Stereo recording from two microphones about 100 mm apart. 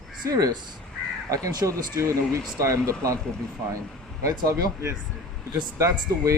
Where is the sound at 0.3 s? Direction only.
35° right (ahead or behind).